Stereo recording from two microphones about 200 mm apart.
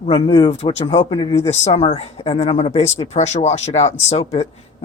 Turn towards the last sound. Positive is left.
turn(degrees=35)  # may be behind; listen again after turning